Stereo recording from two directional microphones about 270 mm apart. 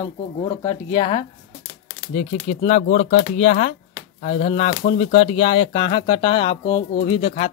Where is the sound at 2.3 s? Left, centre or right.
Left.